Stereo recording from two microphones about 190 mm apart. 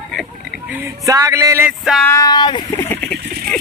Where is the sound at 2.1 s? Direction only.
20° left (ahead or behind).